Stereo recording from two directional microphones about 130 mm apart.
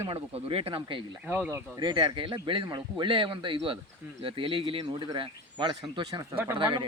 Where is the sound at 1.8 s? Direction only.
35° right (ahead or behind).